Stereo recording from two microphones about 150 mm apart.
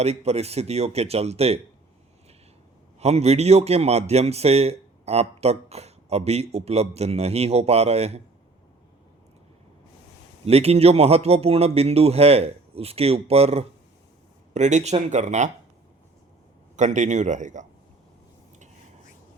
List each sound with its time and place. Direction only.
0.0 s a man's voice: 45° right (ahead or behind)
3.0 s a man's voice: 45° right (ahead or behind)
10.4 s a man's voice: 45° right (ahead or behind)
16.7 s a man's voice: 55° right (ahead or behind)